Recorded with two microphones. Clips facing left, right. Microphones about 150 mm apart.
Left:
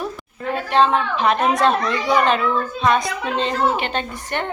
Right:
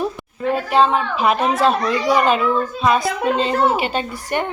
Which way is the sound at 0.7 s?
5° right (ahead or behind).